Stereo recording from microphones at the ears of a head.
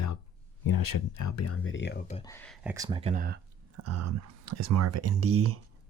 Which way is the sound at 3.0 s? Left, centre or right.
Right.